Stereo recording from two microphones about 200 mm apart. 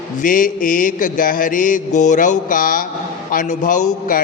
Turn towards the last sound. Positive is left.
turn(degrees=40)  # may be behind; listen again after turning